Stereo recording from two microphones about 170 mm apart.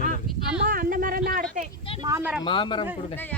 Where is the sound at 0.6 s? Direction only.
55° right (ahead or behind).